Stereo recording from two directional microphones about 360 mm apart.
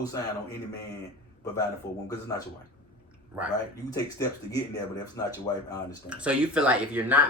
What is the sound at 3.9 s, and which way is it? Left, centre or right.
Speech, centre.